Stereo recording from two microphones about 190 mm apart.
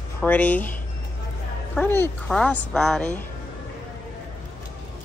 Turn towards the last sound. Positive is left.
turn(degrees=5)  # may be behind; listen again after turning